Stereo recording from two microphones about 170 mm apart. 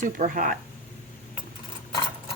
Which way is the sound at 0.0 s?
50° right (ahead or behind).